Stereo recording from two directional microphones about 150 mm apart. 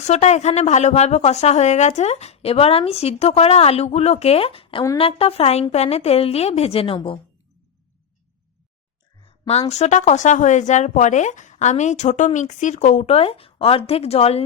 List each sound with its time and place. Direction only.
0.0 s a woman's voice: 50° left (ahead or behind)
9.5 s a woman's voice: 45° left (ahead or behind)